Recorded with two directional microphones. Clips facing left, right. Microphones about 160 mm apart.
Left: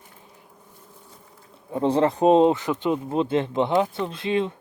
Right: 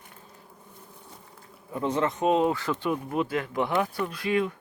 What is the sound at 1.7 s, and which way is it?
Speech, 30° left (ahead or behind).